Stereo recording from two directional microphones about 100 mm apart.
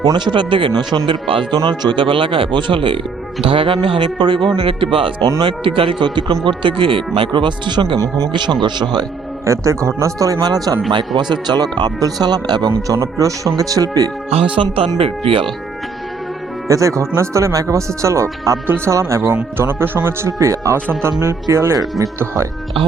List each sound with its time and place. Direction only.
0.0 s speech: 45° right (ahead or behind)
7.9 s speech: 35° right (ahead or behind)
8.3 s speech: 50° right (ahead or behind)
9.5 s speech: 30° right (ahead or behind)
13.0 s speech: 35° right (ahead or behind)
14.3 s speech: 75° right (ahead or behind)
14.9 s speech: 70° right (ahead or behind)
16.6 s speech: 30° right (ahead or behind)